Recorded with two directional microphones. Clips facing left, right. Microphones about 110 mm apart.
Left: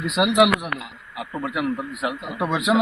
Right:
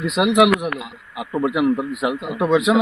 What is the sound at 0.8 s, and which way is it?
A man's voice, 20° right (ahead or behind).